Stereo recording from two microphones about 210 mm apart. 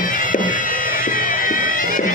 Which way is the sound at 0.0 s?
40° left (ahead or behind).